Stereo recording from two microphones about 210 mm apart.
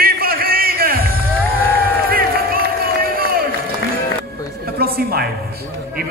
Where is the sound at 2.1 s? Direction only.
45° right (ahead or behind).